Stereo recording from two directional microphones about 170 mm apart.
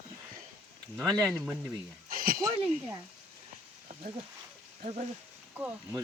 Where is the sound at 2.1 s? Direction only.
60° right (ahead or behind).